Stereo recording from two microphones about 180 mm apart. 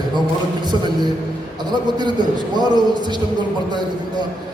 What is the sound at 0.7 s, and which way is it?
A man's voice, 25° right (ahead or behind).